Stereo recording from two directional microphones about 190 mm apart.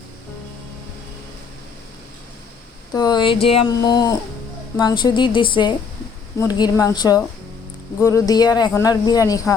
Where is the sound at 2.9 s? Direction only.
20° left (ahead or behind).